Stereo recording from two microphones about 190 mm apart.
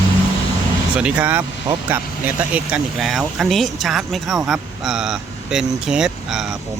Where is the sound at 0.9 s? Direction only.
5° right (ahead or behind).